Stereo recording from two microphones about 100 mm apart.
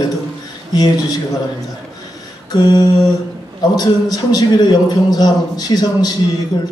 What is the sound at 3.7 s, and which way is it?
A man's voice, 40° left (ahead or behind).